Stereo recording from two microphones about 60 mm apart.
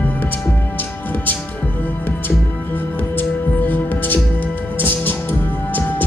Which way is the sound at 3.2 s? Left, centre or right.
Left.